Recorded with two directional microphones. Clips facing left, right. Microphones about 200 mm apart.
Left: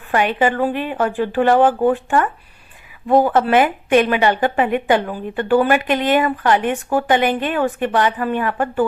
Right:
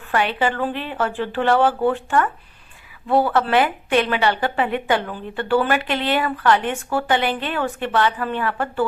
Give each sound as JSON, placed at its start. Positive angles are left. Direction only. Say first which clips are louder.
{"t": 0.3, "sound": "speech", "louder": "left 4 dB", "side_deg": 15}